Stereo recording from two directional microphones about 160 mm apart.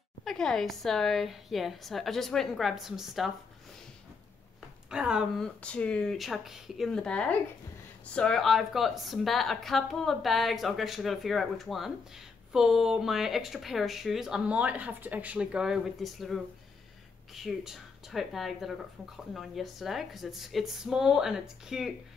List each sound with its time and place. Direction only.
0.2 s a woman's voice: centre (ahead or behind)
4.8 s speech: 5° right (ahead or behind)
5.4 s a woman's voice: 5° left (ahead or behind)